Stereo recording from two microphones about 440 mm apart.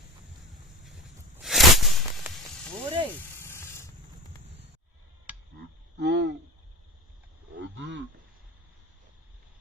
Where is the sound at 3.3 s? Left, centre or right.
Centre.